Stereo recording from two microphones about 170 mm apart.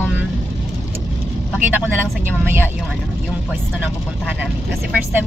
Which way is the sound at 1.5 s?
10° right (ahead or behind).